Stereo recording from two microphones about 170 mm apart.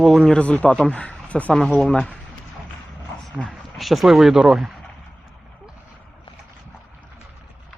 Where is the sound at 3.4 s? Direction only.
Centre (ahead or behind).